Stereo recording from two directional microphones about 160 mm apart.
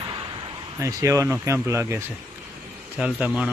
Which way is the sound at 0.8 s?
20° right (ahead or behind).